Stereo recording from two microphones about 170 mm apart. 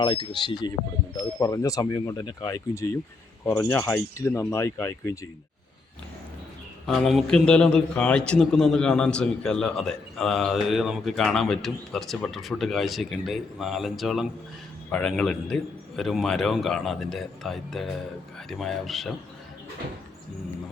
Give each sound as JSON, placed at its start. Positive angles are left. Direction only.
{"t": 0.0, "sound": "speech", "side_deg": 25}
{"t": 6.8, "sound": "a man's voice", "side_deg": 0}